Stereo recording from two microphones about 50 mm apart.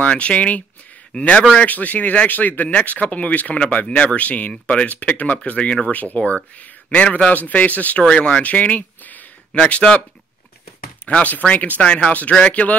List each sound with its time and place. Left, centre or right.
0.0 s a man's voice: left
1.7 s speech: left
8.0 s speech: centre
8.5 s a sound: left
9.5 s speech: left
11.1 s speech: left